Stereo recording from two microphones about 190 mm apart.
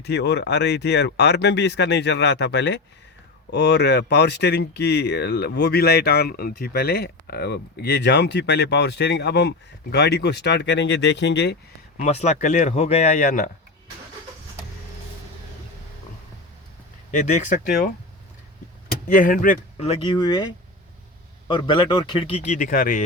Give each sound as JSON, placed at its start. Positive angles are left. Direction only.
{"t": 0.0, "sound": "speech", "side_deg": 60}
{"t": 11.9, "sound": "speech", "side_deg": 40}
{"t": 17.1, "sound": "speech", "side_deg": 40}
{"t": 19.0, "sound": "speech", "side_deg": 45}
{"t": 19.7, "sound": "a man's voice", "side_deg": 25}
{"t": 21.4, "sound": "a man's voice", "side_deg": 25}